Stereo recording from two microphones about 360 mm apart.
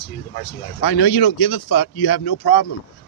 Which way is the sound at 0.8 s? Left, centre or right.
Left.